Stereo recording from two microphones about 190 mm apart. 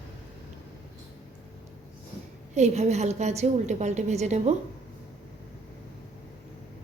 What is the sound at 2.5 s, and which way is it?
A woman's voice, 35° right (ahead or behind).